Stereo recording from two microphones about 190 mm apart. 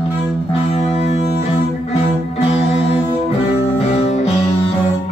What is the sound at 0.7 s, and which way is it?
Music, 35° left (ahead or behind).